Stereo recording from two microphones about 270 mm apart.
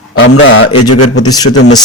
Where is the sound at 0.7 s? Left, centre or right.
Left.